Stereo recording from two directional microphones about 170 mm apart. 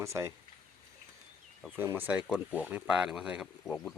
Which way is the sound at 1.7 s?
15° right (ahead or behind).